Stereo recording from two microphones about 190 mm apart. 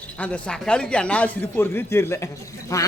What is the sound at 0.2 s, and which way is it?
Speech, 5° left (ahead or behind).